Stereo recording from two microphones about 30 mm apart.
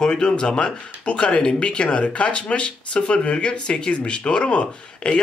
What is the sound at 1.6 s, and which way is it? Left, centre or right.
Speech, left.